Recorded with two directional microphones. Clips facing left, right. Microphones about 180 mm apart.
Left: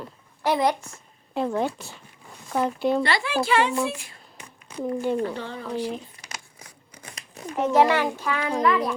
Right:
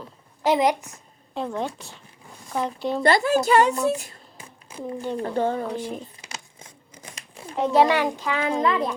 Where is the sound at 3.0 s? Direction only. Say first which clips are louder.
Right 5 dB; 45° right (ahead or behind).